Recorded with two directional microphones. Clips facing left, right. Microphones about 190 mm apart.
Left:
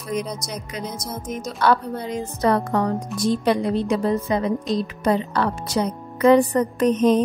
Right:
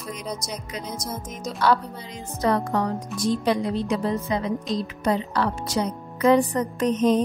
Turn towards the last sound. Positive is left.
turn(degrees=60)  # may be behind; listen again after turning